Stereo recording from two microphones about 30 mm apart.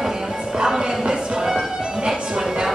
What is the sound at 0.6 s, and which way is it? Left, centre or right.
Music, right.